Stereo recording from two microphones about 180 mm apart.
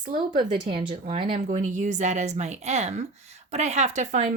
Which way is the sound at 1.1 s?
40° right (ahead or behind).